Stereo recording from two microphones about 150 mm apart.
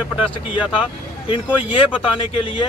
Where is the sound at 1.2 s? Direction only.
35° left (ahead or behind).